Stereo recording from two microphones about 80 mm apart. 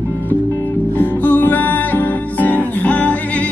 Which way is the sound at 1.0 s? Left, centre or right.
Left.